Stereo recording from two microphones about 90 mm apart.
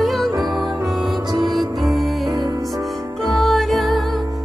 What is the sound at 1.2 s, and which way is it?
Music, 50° right (ahead or behind).